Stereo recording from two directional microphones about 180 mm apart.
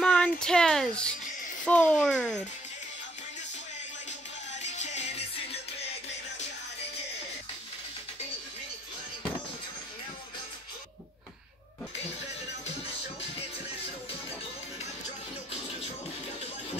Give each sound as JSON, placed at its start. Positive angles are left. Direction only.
{"t": 0.0, "sound": "music", "side_deg": 5}
{"t": 1.6, "sound": "a child's voice", "side_deg": 5}
{"t": 4.6, "sound": "music", "side_deg": 40}